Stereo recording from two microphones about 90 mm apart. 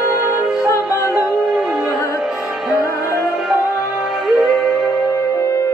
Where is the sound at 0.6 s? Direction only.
35° left (ahead or behind).